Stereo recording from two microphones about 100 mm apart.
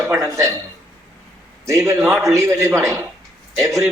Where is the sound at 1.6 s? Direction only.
30° right (ahead or behind).